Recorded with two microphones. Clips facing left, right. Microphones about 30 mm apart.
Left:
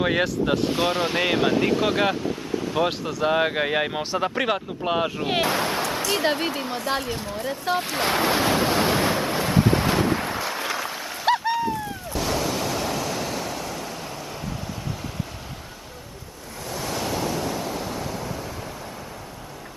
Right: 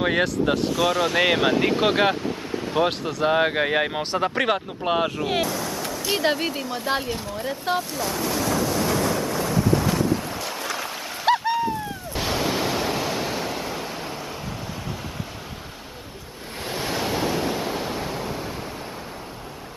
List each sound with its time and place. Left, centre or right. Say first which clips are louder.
0.0 s speech: right 1 dB; centre
0.7 s speech: right 2 dB; left
1.2 s speech: even; centre
5.4 s a sound: left 3 dB; left
6.3 s speech: even; centre
6.9 s speech: right 2 dB; centre
7.9 s waves: left 4 dB; left
10.4 s boat: left 2 dB; centre
10.8 s a sound: even; centre
12.1 s waves: right 1 dB; right
16.7 s waves: right 2 dB; right